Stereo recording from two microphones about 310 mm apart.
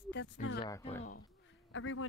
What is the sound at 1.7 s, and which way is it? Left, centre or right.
Speech, left.